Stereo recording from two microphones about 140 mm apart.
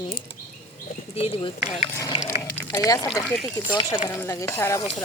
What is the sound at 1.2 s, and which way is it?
Speech, 45° left (ahead or behind).